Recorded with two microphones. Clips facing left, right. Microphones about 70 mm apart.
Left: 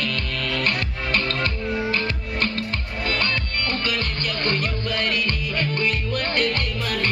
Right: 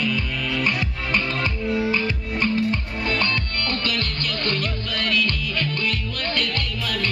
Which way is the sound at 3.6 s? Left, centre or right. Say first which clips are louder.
Even; centre.